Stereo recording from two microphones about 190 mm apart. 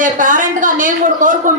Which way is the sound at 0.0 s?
45° right (ahead or behind).